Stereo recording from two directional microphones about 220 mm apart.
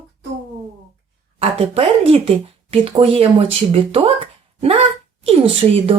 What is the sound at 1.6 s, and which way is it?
Speech, 25° right (ahead or behind).